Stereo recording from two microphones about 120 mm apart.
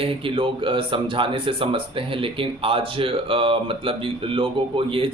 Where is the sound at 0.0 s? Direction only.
50° right (ahead or behind).